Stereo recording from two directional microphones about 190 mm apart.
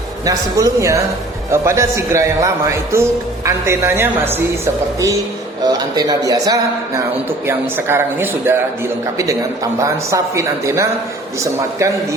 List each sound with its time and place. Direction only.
0.3 s speech: 15° right (ahead or behind)